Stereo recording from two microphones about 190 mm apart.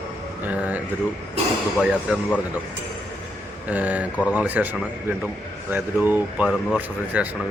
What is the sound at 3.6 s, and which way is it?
A man's voice, 10° right (ahead or behind).